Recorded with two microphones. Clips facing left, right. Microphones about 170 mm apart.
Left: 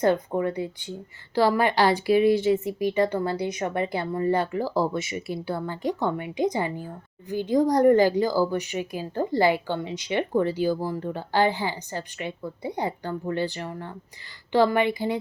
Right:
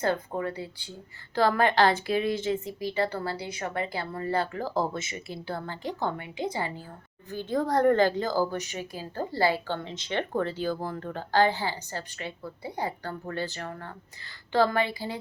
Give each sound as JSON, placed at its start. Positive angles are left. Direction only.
{"t": 0.0, "sound": "a woman's voice", "side_deg": 20}